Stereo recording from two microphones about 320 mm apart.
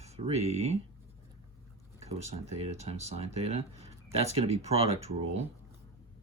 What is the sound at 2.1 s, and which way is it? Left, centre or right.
Speech, centre.